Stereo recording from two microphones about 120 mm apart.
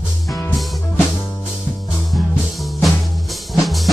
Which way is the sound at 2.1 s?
Centre (ahead or behind).